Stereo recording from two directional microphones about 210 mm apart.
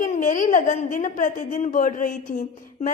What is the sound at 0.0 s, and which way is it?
A woman's voice, 40° left (ahead or behind).